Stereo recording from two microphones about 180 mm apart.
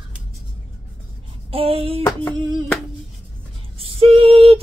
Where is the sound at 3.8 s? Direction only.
30° right (ahead or behind).